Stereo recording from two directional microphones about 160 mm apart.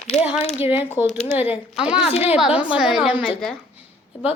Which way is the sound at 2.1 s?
40° left (ahead or behind).